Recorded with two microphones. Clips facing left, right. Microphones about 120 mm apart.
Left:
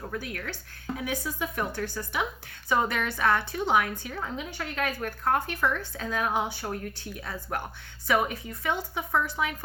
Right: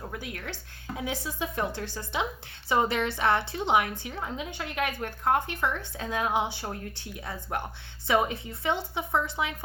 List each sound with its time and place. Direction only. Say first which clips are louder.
0.1 s a woman's voice: left 2 dB; 20° right (ahead or behind)